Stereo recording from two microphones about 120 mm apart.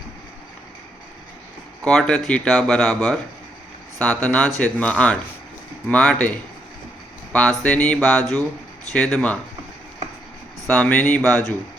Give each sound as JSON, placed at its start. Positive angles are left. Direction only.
{"t": 1.8, "sound": "speech", "side_deg": 10}
{"t": 7.9, "sound": "a sound", "side_deg": 5}
{"t": 8.9, "sound": "speech", "side_deg": 5}
{"t": 10.7, "sound": "speech", "side_deg": 10}